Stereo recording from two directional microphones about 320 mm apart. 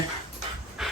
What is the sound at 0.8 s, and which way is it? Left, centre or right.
Pant, centre.